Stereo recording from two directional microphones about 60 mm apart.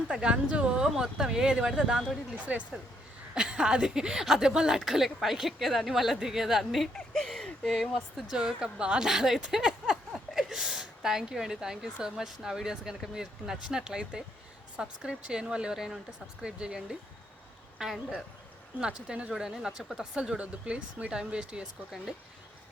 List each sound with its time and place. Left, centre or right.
0.1 s speech: centre
2.4 s a woman's voice: right; by 8.2 s centre
8.3 s speech: centre